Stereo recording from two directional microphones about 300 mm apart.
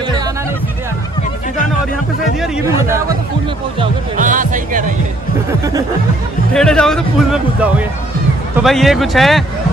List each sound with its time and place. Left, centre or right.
2.4 s speech: centre
3.8 s speech: right
5.5 s speech: centre
6.5 s speech: centre